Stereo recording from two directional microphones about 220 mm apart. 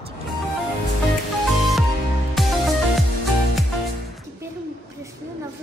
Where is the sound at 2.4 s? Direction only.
Centre (ahead or behind).